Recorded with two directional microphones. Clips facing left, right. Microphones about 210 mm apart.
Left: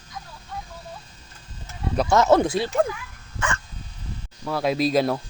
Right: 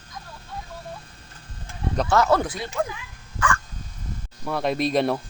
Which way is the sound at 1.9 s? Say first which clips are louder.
Left 2 dB; 10° left (ahead or behind).